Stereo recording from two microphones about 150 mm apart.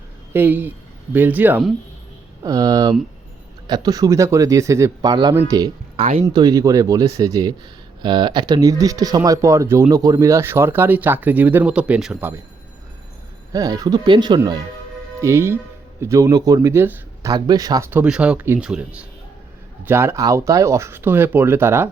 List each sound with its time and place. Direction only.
0.3 s speech: 15° right (ahead or behind)
2.4 s speech: 25° right (ahead or behind)
6.0 s speech: 40° right (ahead or behind)
6.2 s speech: 25° right (ahead or behind); by 12.3 s 5° right (ahead or behind)
13.5 s speech: 25° right (ahead or behind)
17.3 s speech: 25° right (ahead or behind)